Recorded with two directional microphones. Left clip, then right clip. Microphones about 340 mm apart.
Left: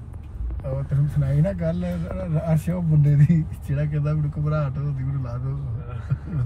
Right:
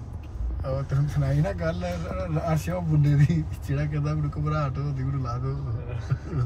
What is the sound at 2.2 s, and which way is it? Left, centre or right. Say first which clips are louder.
Speech: left 2 dB; right.